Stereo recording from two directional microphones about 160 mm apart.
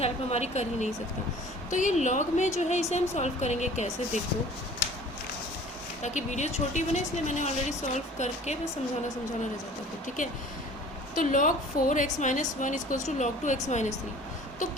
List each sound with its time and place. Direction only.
0.0 s a woman's voice: 40° left (ahead or behind)
6.0 s a woman's voice: 45° left (ahead or behind)
11.1 s a woman's voice: 55° left (ahead or behind)